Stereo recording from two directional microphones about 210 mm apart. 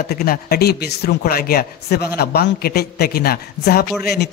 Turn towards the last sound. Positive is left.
turn(degrees=50)  # may be behind; listen again after turning